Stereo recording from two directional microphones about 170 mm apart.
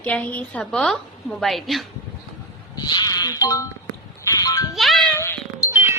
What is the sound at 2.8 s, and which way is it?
Speech, 25° left (ahead or behind).